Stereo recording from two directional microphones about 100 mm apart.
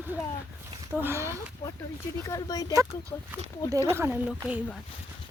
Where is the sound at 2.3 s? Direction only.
40° left (ahead or behind).